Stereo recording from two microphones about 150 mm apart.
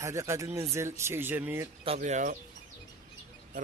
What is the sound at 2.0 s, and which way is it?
Speech, 55° right (ahead or behind).